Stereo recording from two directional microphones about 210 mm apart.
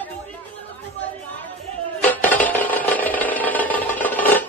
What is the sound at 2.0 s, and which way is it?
Music, 10° left (ahead or behind).